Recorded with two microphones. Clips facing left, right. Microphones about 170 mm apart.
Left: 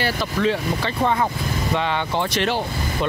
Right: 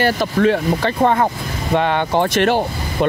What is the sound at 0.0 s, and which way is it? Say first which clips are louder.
Speech: right 6 dB; 55° right (ahead or behind).